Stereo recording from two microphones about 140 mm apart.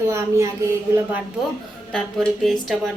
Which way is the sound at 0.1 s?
20° right (ahead or behind).